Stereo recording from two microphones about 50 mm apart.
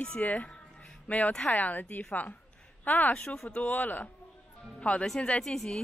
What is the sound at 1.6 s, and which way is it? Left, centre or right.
Speech, left.